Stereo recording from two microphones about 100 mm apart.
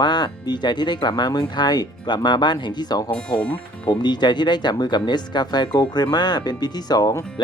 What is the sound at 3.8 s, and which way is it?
Speech, 45° left (ahead or behind).